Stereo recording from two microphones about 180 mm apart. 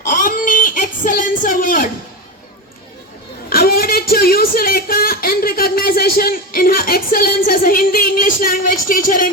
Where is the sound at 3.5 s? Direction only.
55° left (ahead or behind).